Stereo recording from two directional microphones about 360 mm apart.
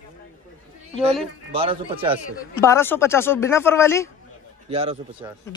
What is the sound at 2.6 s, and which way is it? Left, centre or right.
Speech, centre.